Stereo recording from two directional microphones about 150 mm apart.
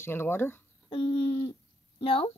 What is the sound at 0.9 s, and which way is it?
Owl, 40° left (ahead or behind).